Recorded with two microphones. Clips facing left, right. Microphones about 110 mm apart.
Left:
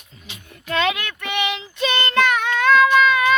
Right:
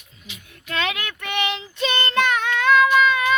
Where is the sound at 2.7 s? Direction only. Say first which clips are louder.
Left 2 dB; 15° right (ahead or behind).